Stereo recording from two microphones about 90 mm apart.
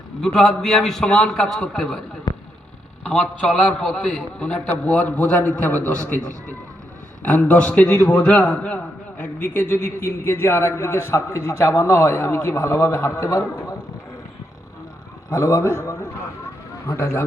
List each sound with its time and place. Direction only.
0.3 s a man's voice: centre (ahead or behind)
2.3 s a sound: 50° left (ahead or behind)
3.0 s a man's voice: 15° left (ahead or behind); by 13.7 s 35° left (ahead or behind)
15.3 s a man's voice: 35° left (ahead or behind)